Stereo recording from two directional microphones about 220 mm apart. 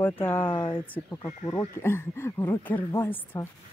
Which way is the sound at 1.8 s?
10° left (ahead or behind).